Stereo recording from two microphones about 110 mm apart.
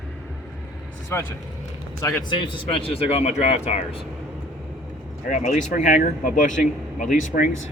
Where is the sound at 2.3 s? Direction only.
50° left (ahead or behind); by 3.8 s 75° left (ahead or behind).